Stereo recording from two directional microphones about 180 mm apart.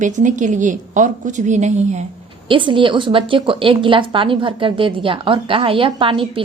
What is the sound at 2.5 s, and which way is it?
A woman's voice, 25° right (ahead or behind).